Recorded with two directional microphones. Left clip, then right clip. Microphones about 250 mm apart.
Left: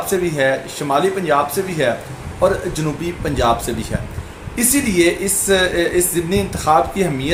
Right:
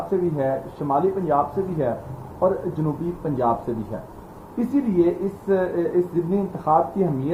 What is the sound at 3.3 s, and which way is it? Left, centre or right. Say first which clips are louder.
Speech: left 6 dB; left.